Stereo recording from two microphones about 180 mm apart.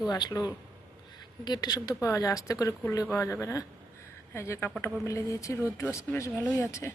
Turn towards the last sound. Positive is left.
turn(degrees=15)  # may be behind; listen again after turning